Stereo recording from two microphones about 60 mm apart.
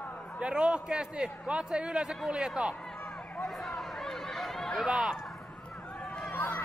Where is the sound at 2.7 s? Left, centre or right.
Centre.